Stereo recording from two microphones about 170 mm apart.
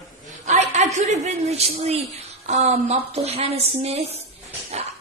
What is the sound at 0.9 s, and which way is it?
A woman's voice, 45° right (ahead or behind).